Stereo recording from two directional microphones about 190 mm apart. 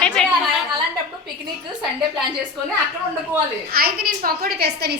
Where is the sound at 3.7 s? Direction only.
50° right (ahead or behind).